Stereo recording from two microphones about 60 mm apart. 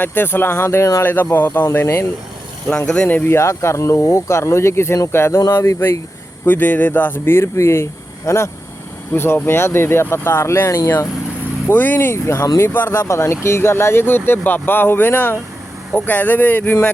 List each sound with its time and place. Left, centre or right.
0.0 s speech: left
2.8 s speech: centre
3.2 s speech: left
6.4 s speech: left
9.1 s speech: left
11.7 s speech: left
11.9 s speech: left